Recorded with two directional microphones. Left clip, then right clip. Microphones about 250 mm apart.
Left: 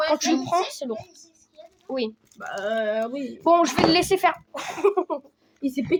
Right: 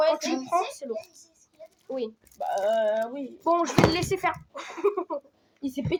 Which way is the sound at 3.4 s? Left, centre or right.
Left.